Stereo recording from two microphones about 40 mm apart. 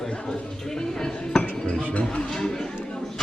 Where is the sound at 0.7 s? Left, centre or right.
Centre.